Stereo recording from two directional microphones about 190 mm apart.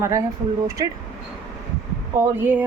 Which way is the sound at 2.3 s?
10° right (ahead or behind).